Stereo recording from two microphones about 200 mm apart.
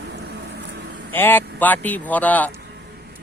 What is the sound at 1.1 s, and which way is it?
Speech, 10° left (ahead or behind).